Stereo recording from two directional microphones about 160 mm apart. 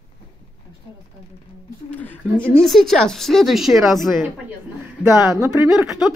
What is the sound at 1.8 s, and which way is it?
A woman's voice, 10° left (ahead or behind).